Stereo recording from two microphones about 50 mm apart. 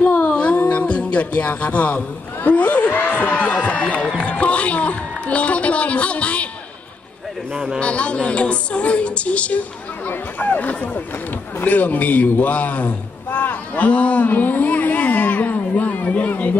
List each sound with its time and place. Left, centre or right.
0.1 s a sound: left
0.6 s a man's voice: left
7.8 s a woman's voice: left